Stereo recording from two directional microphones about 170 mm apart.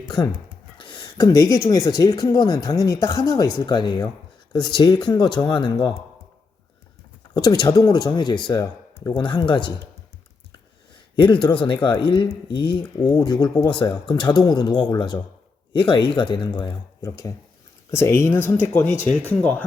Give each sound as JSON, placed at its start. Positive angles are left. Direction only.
{"t": 0.8, "sound": "speech", "side_deg": 30}
{"t": 7.3, "sound": "speech", "side_deg": 25}
{"t": 11.2, "sound": "speech", "side_deg": 25}